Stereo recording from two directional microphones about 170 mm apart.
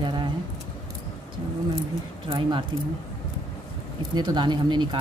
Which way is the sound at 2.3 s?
30° right (ahead or behind).